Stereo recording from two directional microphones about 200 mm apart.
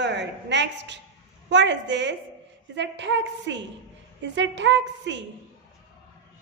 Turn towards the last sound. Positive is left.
turn(degrees=-65)  # may be behind; listen again after turning